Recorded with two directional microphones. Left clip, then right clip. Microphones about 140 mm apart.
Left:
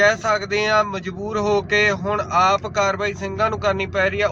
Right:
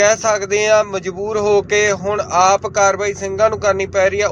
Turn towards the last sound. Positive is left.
turn(degrees=-25)  # may be behind; listen again after turning